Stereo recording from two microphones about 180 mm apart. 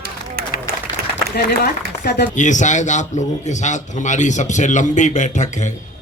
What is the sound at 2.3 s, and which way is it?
A man's voice, 45° left (ahead or behind).